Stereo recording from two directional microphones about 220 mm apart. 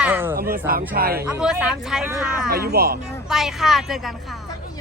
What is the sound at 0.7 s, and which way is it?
Speech, 45° right (ahead or behind).